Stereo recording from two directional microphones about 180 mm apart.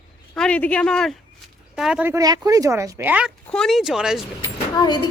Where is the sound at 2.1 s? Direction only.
20° right (ahead or behind).